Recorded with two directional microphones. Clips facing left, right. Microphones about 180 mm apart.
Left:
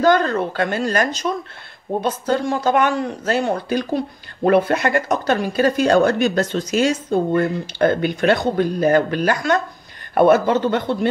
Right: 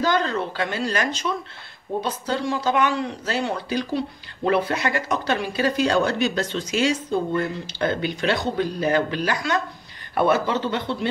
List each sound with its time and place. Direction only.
0.0 s speech: 50° left (ahead or behind)